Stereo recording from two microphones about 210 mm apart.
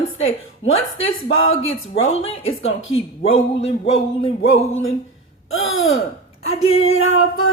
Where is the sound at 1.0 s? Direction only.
70° left (ahead or behind).